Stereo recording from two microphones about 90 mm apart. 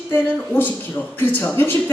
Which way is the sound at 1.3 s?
20° left (ahead or behind).